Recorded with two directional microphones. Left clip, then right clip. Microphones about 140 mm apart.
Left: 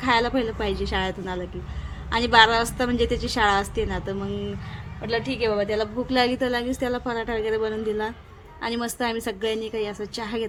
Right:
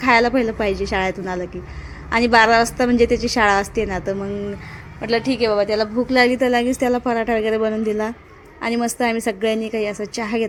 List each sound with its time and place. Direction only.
0.0 s a woman's voice: 40° right (ahead or behind)
5.0 s a woman's voice: 60° right (ahead or behind); by 10.4 s 35° right (ahead or behind)